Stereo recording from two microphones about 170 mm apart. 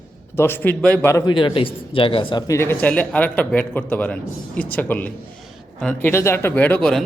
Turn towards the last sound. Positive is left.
turn(degrees=5)  # may be behind; listen again after turning